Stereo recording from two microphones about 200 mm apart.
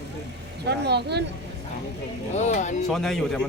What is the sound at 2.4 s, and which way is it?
Speech, 35° left (ahead or behind).